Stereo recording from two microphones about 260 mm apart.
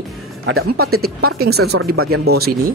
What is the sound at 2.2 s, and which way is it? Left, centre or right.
Speech, right.